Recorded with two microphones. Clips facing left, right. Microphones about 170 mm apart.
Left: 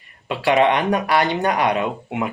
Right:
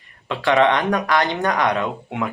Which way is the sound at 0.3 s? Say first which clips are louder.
Even; 15° left (ahead or behind).